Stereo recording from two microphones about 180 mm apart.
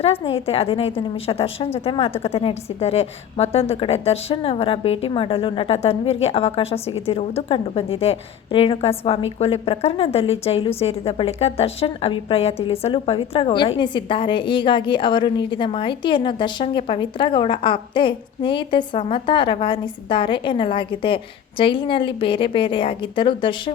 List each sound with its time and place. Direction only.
0.0 s a woman's voice: 35° left (ahead or behind)